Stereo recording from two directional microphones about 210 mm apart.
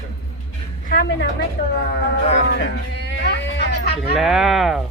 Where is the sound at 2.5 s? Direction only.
55° left (ahead or behind).